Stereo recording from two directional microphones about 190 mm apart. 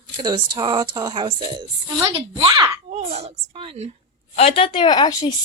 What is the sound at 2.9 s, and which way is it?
Speech, 35° right (ahead or behind).